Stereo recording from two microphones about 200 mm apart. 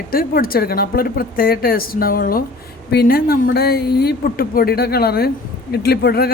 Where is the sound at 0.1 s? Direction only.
45° left (ahead or behind).